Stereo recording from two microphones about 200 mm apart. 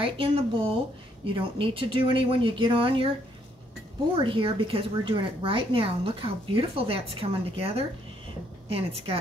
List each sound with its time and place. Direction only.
0.0 s speech: 25° right (ahead or behind)